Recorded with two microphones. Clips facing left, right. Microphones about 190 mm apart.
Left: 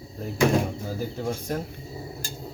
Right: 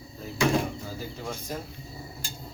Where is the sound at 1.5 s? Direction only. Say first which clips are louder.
Left 5 dB; 60° left (ahead or behind).